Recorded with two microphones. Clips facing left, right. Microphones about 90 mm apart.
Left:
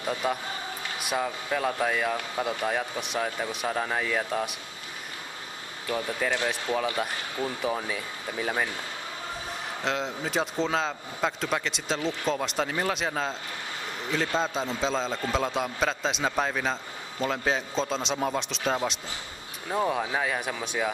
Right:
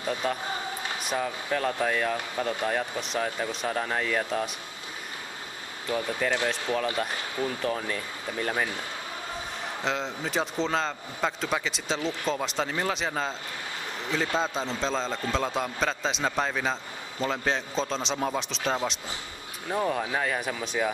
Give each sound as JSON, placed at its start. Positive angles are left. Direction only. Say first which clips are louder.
{"t": 0.0, "sound": "a man's voice", "louder": "even", "side_deg": 15}
{"t": 6.3, "sound": "speech", "louder": "even", "side_deg": 20}
{"t": 7.6, "sound": "speech", "louder": "even", "side_deg": 5}
{"t": 9.8, "sound": "a man's voice", "louder": "left 1 dB", "side_deg": 0}